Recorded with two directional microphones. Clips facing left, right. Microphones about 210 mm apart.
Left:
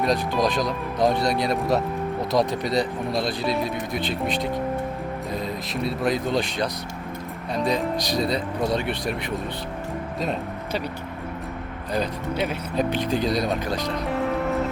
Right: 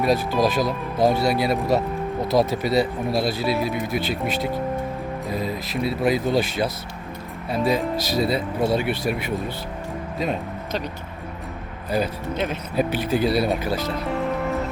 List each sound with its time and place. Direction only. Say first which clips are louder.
0.0 s speech: right 2 dB; 5° right (ahead or behind)
12.3 s speech: left 2 dB; 10° left (ahead or behind)
12.7 s speech: right 2 dB; 5° right (ahead or behind)